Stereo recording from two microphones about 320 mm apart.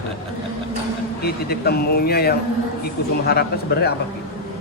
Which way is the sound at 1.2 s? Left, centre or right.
Left.